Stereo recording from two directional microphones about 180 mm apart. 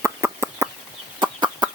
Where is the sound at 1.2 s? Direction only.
25° right (ahead or behind).